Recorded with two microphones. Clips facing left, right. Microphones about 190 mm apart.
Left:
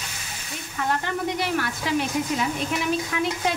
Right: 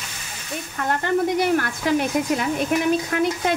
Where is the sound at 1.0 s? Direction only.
50° right (ahead or behind).